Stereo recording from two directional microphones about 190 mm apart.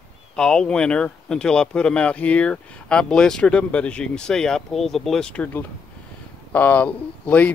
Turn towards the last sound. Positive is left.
turn(degrees=5)  # may be behind; listen again after turning